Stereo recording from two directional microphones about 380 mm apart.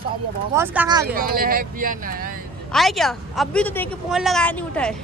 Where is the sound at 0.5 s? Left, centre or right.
Centre.